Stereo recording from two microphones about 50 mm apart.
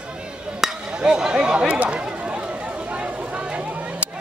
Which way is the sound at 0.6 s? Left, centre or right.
Centre.